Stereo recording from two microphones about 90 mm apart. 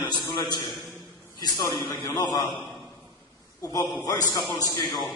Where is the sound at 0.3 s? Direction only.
55° left (ahead or behind).